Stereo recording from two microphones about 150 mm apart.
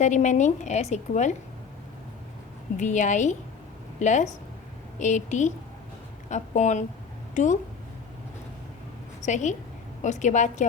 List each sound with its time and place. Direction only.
0.0 s a woman's voice: 55° left (ahead or behind)
2.7 s a woman's voice: 55° left (ahead or behind)
9.2 s a woman's voice: 55° left (ahead or behind)